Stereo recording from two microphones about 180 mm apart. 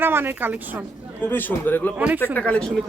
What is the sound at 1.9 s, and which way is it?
Speech, 10° right (ahead or behind).